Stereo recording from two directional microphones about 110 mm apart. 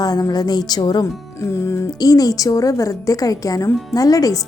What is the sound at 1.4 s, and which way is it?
Speech, 25° left (ahead or behind).